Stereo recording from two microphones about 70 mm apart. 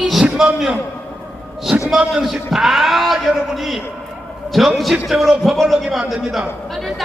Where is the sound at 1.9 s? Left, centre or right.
Centre.